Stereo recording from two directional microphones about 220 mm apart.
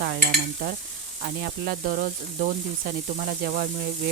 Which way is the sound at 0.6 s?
40° right (ahead or behind).